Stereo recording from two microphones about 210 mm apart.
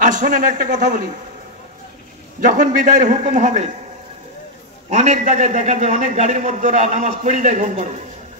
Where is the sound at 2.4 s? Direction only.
40° right (ahead or behind).